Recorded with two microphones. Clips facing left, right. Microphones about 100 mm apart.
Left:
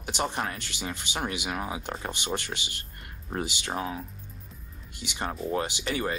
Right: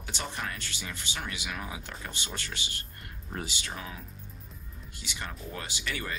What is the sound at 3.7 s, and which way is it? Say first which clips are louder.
Speech: left 9 dB; 35° left (ahead or behind).